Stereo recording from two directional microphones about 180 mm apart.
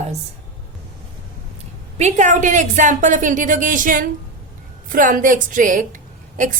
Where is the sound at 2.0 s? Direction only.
40° right (ahead or behind).